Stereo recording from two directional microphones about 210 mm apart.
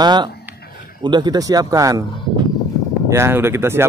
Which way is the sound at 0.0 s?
20° right (ahead or behind).